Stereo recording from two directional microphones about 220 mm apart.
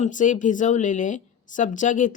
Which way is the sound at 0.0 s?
35° left (ahead or behind).